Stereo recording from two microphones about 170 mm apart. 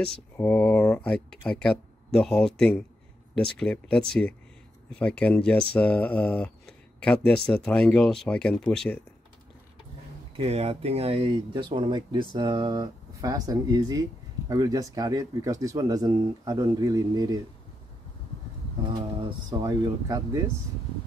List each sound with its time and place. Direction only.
0.0 s speech: 5° left (ahead or behind)
10.3 s speech: 40° right (ahead or behind); by 17.4 s 20° right (ahead or behind)
19.1 s speech: 25° right (ahead or behind)